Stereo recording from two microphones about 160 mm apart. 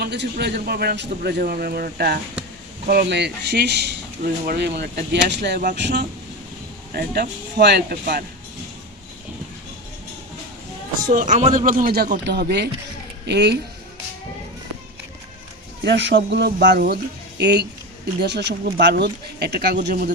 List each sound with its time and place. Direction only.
0.0 s a man's voice: 90° right
6.9 s a man's voice: 80° right
11.1 s speech: 50° right (ahead or behind); by 13.6 s 90° right
15.8 s speech: 90° right
18.2 s speech: 90° right; by 20.1 s 60° right (ahead or behind)